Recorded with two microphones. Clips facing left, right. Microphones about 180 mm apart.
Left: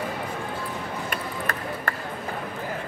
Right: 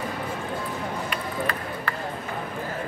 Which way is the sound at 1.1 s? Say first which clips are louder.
Right 2 dB; 45° left (ahead or behind).